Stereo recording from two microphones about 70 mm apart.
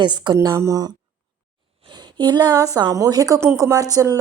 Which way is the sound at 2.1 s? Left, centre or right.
Right.